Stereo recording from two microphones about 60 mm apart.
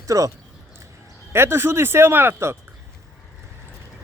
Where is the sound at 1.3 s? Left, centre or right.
Right.